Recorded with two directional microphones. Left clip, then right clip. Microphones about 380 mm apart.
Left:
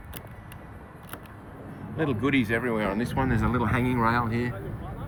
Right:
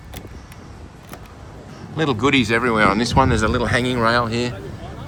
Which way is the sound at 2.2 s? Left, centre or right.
Centre.